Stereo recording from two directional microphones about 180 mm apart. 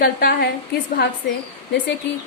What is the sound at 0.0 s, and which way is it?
Speech, 55° left (ahead or behind).